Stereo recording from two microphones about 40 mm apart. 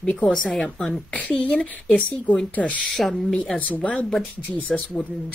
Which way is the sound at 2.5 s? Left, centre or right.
Left.